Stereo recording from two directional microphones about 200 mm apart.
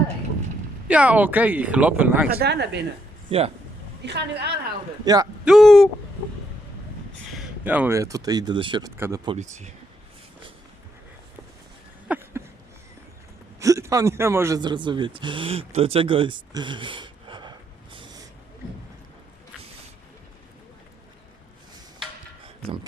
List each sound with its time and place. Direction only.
0.9 s speech: 5° right (ahead or behind)
2.4 s a woman's voice: 55° right (ahead or behind)
3.2 s speech: 30° right (ahead or behind)
4.0 s a woman's voice: 55° right (ahead or behind)
5.0 s speech: 20° right (ahead or behind)
5.5 s speech: centre (ahead or behind)
7.3 s speech: 5° right (ahead or behind); by 8.9 s 25° right (ahead or behind)
9.0 s speech: 10° right (ahead or behind)
9.2 s speech: 35° right (ahead or behind)
12.0 s a sound: 10° right (ahead or behind)
13.6 s speech: 15° right (ahead or behind)
22.6 s speech: 25° right (ahead or behind)